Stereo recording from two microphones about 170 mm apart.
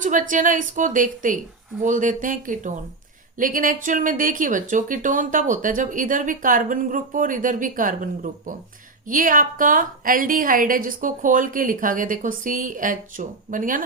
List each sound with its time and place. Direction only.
0.0 s speech: 50° right (ahead or behind)